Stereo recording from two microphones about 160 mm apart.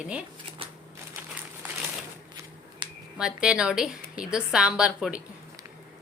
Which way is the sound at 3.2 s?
5° right (ahead or behind).